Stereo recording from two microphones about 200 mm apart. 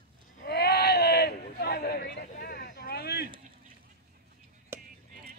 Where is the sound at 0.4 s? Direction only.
55° left (ahead or behind).